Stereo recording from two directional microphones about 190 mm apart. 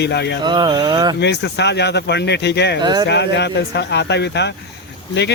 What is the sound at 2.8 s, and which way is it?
Speech, 20° right (ahead or behind).